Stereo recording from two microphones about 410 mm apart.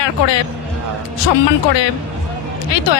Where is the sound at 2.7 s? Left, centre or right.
Left.